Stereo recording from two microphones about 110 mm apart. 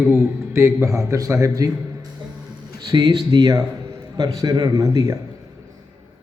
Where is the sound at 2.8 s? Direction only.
40° right (ahead or behind).